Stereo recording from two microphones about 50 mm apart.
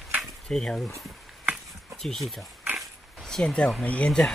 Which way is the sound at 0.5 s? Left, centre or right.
Centre.